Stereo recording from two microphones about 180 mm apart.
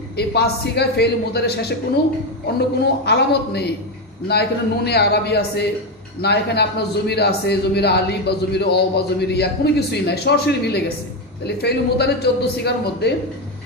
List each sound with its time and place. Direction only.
0.2 s a man's voice: 65° left (ahead or behind)